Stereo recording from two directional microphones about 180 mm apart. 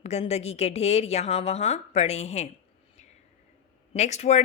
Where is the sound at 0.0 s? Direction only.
35° left (ahead or behind).